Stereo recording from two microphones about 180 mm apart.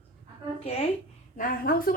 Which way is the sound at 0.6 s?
35° left (ahead or behind).